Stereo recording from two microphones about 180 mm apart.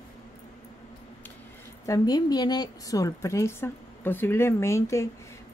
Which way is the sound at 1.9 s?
20° left (ahead or behind).